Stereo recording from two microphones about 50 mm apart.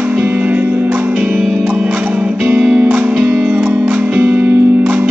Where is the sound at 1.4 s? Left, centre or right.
Right.